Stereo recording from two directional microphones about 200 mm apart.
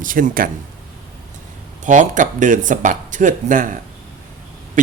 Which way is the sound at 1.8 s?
40° right (ahead or behind).